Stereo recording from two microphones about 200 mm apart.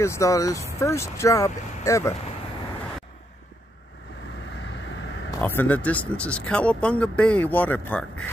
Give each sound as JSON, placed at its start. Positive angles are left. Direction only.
{"t": 0.0, "sound": "speech", "side_deg": 15}
{"t": 4.6, "sound": "vehicle", "side_deg": 65}
{"t": 5.4, "sound": "speech", "side_deg": 10}